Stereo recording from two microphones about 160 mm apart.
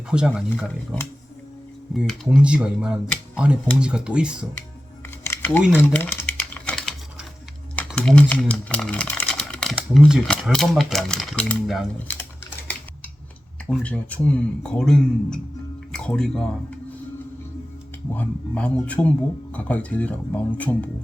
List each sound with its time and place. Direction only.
0.1 s speech: 5° right (ahead or behind)
1.9 s speech: centre (ahead or behind)
5.2 s a sound: 15° left (ahead or behind)
5.7 s typing: 15° left (ahead or behind)
7.8 s speech: 5° left (ahead or behind)
13.7 s speech: 10° left (ahead or behind)
18.1 s speech: 10° left (ahead or behind)